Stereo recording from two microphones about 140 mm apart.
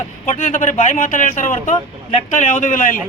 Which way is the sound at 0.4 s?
65° left (ahead or behind).